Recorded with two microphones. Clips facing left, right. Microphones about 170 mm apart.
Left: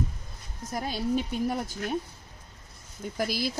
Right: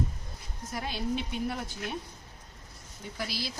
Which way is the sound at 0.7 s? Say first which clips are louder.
Left 4 dB; 40° left (ahead or behind).